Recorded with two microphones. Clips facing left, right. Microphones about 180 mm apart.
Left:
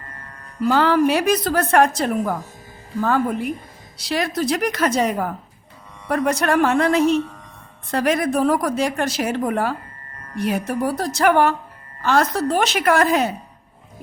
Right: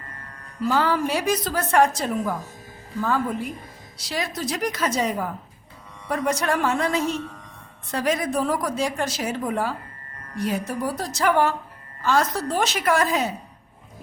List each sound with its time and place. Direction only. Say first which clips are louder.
0.6 s a woman's voice: left 5 dB; 70° left (ahead or behind)